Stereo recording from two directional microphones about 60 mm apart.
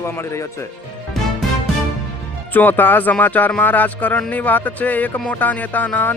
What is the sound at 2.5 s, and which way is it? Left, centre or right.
Speech, left.